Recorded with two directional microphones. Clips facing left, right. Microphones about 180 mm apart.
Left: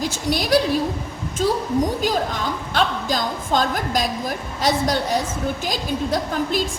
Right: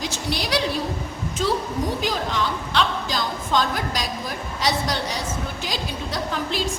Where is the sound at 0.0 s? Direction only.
45° left (ahead or behind).